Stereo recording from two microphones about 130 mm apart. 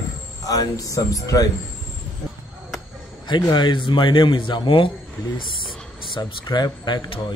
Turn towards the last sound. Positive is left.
turn(degrees=35)  # may be behind; listen again after turning